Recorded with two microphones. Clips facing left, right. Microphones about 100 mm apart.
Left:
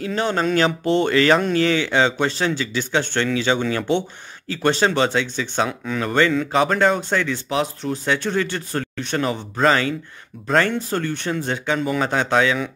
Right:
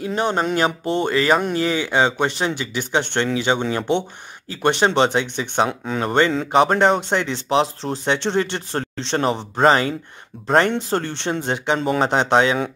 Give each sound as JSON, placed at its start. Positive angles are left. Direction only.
{"t": 0.0, "sound": "speech", "side_deg": -20}
{"t": 5.7, "sound": "speech", "side_deg": -30}
{"t": 11.8, "sound": "speech", "side_deg": -35}
{"t": 12.1, "sound": "speech", "side_deg": -25}